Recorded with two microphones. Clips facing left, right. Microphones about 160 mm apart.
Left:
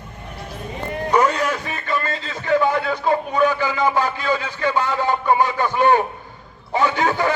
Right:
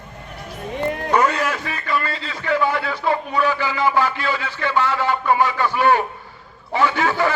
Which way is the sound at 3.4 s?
20° left (ahead or behind).